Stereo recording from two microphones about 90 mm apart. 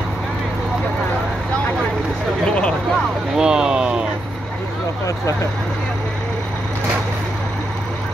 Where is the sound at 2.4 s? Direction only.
10° left (ahead or behind).